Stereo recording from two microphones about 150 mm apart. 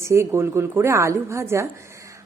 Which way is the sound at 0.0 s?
20° right (ahead or behind).